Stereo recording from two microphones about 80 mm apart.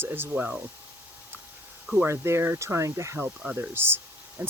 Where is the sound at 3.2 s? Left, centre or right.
Right.